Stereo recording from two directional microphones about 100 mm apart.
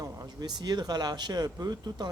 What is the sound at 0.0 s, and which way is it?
Speech, 40° right (ahead or behind).